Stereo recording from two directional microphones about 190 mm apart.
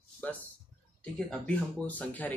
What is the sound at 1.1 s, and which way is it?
Speech, 5° left (ahead or behind).